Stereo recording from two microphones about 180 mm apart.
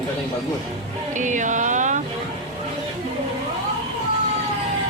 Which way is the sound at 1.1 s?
45° right (ahead or behind).